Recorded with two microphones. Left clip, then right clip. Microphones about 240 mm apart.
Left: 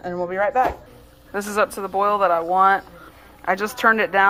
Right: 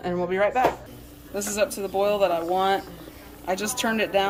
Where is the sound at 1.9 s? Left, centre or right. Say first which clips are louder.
Left 4 dB; left.